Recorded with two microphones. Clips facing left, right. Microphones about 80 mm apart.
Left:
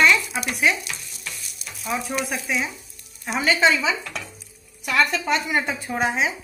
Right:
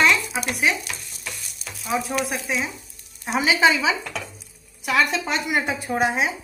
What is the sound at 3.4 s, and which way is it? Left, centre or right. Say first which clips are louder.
Speech: right 1 dB; centre.